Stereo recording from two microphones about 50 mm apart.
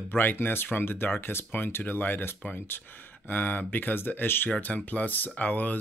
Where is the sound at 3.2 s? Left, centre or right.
Left.